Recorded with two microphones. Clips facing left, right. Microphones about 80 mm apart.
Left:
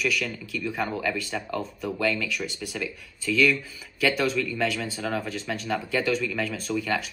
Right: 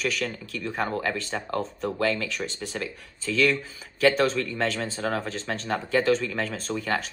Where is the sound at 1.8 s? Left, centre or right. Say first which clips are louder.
Even; right.